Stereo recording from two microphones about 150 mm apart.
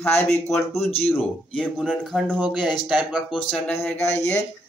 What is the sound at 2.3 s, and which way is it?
Speech, 10° right (ahead or behind).